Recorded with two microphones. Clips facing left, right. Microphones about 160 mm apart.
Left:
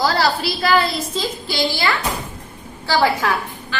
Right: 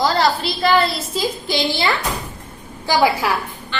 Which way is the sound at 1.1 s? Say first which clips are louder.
Right 2 dB; 20° right (ahead or behind).